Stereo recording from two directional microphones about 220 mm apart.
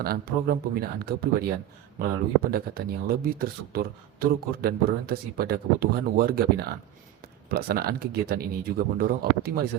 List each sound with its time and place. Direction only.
0.0 s speech: 45° right (ahead or behind)